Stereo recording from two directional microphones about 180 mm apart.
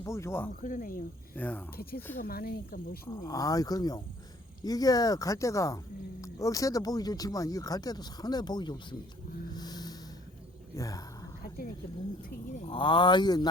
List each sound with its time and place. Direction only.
0.0 s speech: 15° left (ahead or behind)
0.6 s speech: 50° left (ahead or behind)
1.4 s speech: 10° left (ahead or behind)
1.7 s speech: 55° left (ahead or behind)
3.1 s speech: 20° left (ahead or behind)
9.6 s music: 20° left (ahead or behind)
10.8 s speech: 20° left (ahead or behind)
12.6 s speech: 25° left (ahead or behind)